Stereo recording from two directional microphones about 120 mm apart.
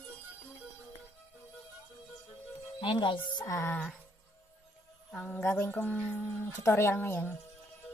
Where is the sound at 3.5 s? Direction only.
20° left (ahead or behind).